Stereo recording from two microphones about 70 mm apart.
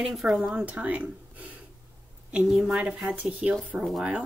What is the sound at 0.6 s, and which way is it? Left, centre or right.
Speech, right.